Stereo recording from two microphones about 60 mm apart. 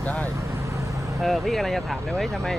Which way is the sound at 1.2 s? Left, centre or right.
Centre.